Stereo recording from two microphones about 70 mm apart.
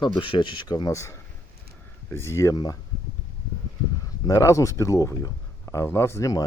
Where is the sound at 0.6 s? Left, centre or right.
Left.